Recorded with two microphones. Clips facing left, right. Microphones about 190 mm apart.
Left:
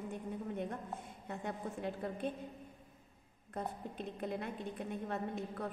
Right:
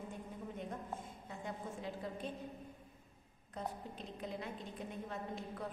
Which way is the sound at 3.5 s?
55° left (ahead or behind).